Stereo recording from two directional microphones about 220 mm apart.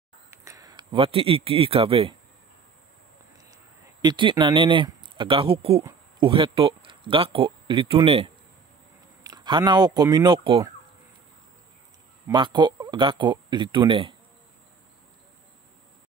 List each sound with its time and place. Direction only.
0.3 s speech: 15° right (ahead or behind)
4.0 s speech: 20° right (ahead or behind)
12.3 s speech: 20° right (ahead or behind)